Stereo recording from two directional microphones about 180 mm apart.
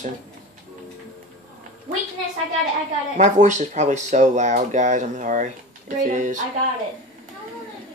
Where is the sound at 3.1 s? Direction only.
40° right (ahead or behind).